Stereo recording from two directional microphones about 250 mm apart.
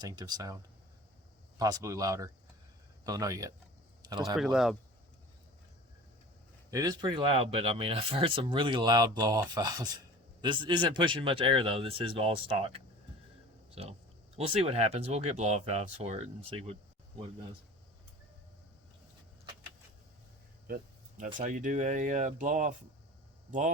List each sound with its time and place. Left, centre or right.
0.0 s speech: centre
4.4 s speech: centre
6.7 s speech: centre
20.7 s a sound: right
21.3 s speech: right